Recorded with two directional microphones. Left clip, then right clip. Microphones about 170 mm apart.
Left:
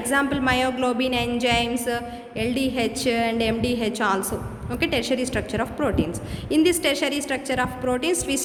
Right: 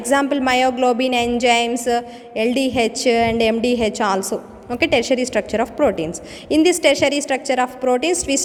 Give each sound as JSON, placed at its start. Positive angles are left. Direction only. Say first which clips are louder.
{"t": 0.1, "sound": "a woman's voice", "louder": "right 5 dB", "side_deg": -35}